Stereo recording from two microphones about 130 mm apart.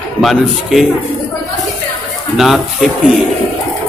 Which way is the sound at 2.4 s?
Centre (ahead or behind).